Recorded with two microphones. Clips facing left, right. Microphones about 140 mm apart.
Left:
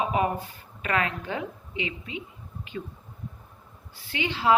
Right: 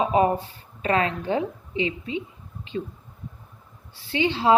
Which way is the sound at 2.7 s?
30° right (ahead or behind).